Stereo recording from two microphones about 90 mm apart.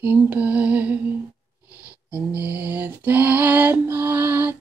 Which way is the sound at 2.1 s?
20° right (ahead or behind).